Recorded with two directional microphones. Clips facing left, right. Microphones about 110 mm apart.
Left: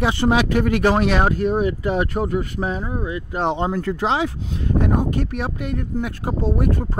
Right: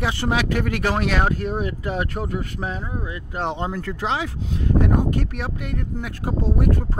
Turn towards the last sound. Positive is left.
turn(degrees=25)  # may be behind; listen again after turning